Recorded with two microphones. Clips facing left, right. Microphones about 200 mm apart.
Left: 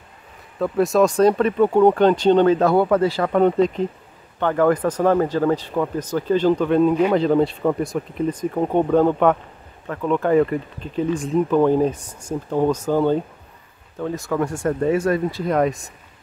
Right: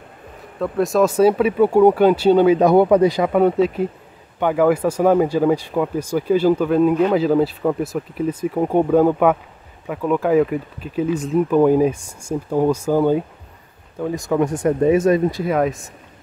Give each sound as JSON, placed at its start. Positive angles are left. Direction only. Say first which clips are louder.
{"t": 0.6, "sound": "speech", "louder": "even", "side_deg": 0}
{"t": 15.4, "sound": "speech", "louder": "even", "side_deg": 0}